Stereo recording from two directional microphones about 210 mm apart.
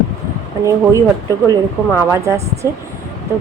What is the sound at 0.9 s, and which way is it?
Speech, 15° right (ahead or behind).